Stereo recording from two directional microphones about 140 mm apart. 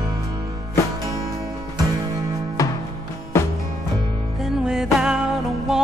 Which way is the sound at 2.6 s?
25° left (ahead or behind).